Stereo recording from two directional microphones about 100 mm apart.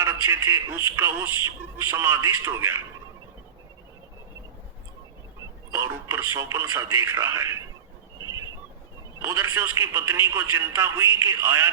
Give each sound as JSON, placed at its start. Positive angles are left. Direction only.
{"t": 0.0, "sound": "a man's voice", "side_deg": -25}
{"t": 5.7, "sound": "a man's voice", "side_deg": -25}
{"t": 9.2, "sound": "a man's voice", "side_deg": -20}